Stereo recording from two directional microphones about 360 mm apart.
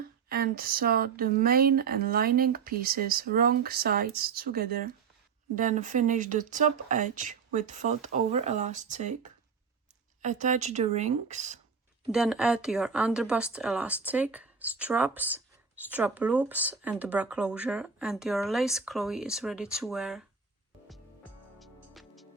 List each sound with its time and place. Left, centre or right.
0.3 s speech: right
12.1 s speech: centre
21.6 s music: centre